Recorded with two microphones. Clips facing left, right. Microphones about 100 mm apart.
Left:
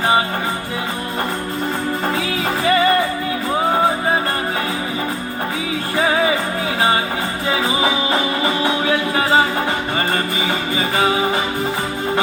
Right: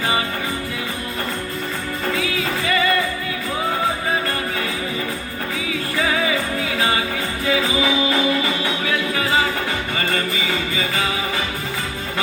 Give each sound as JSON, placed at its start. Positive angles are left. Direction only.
{"t": 2.1, "sound": "music", "side_deg": 30}
{"t": 6.0, "sound": "music", "side_deg": 35}